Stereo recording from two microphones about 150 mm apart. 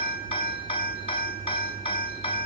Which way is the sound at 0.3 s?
35° left (ahead or behind).